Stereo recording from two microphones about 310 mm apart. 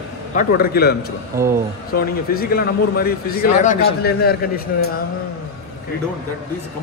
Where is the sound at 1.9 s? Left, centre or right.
Left.